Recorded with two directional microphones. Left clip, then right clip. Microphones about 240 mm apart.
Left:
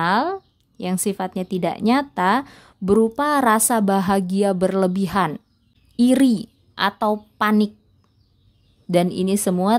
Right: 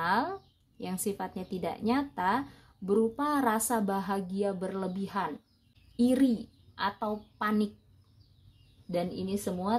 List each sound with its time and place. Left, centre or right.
0.0 s a woman's voice: left
8.9 s a woman's voice: left